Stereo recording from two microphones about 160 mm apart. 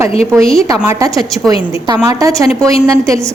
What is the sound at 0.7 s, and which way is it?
A woman's voice, 20° right (ahead or behind).